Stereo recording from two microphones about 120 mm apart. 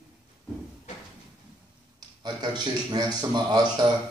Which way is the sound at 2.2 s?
35° right (ahead or behind).